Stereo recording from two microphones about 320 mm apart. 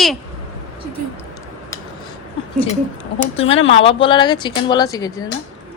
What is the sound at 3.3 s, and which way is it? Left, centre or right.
A woman's voice, centre.